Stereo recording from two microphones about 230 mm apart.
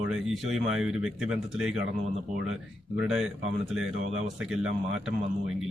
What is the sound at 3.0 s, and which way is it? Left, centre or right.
Speech, centre.